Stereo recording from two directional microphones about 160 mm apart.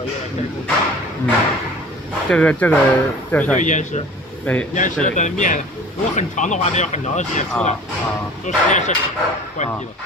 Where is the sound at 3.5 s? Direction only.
50° left (ahead or behind).